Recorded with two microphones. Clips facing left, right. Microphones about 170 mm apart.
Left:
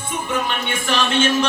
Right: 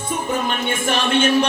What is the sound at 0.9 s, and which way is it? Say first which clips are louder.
Music: right 1 dB; 55° right (ahead or behind).